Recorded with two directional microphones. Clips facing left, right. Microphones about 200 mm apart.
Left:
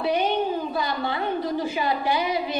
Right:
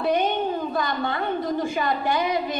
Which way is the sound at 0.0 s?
5° left (ahead or behind).